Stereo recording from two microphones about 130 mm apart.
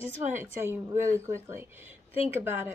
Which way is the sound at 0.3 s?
20° right (ahead or behind).